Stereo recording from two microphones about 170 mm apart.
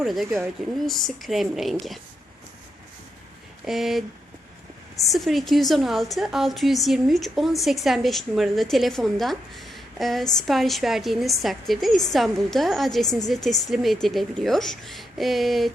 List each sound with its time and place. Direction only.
0.0 s a woman's voice: centre (ahead or behind)
3.7 s a woman's voice: centre (ahead or behind)
5.0 s a woman's voice: centre (ahead or behind)